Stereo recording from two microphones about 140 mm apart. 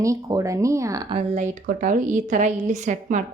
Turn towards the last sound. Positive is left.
turn(degrees=-60)  # may be behind; listen again after turning